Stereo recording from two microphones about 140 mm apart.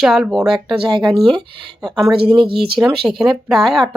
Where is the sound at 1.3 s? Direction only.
35° right (ahead or behind).